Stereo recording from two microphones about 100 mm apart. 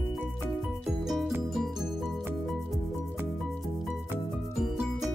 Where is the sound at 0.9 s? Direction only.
Centre (ahead or behind).